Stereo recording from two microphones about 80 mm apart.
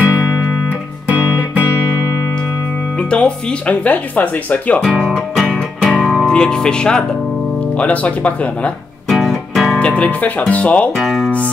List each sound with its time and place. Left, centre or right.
1.0 s music: centre
3.1 s speech: centre
4.8 s music: centre
6.2 s speech: centre
9.1 s music: centre
9.8 s speech: centre
11.0 s music: centre